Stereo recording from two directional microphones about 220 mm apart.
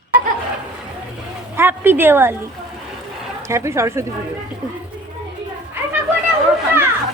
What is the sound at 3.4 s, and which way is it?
Speech, 15° right (ahead or behind).